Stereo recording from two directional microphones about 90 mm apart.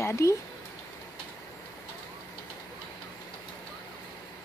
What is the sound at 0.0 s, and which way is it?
Speech, 30° left (ahead or behind).